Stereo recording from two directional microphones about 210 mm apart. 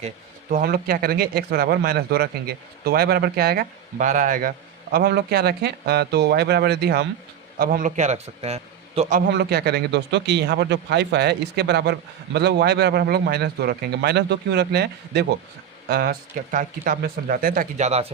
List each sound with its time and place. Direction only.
0.5 s speech: 45° right (ahead or behind)
9.3 s speech: 50° right (ahead or behind); by 18.1 s 30° right (ahead or behind)